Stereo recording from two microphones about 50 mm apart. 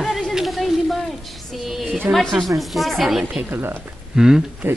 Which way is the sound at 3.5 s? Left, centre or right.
Right.